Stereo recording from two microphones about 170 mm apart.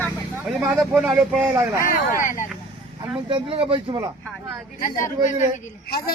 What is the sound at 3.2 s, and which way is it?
Speech, 30° right (ahead or behind).